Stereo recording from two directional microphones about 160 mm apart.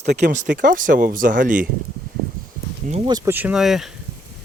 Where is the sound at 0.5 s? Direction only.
55° right (ahead or behind).